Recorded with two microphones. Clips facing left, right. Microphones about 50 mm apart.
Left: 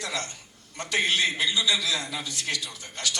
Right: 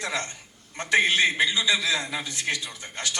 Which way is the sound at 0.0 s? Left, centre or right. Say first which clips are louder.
Right 3 dB; right.